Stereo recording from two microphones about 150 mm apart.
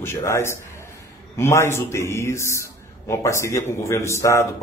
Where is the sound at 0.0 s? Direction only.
20° left (ahead or behind).